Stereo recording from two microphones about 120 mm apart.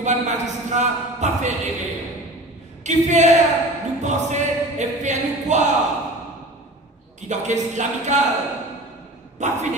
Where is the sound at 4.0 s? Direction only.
75° right (ahead or behind).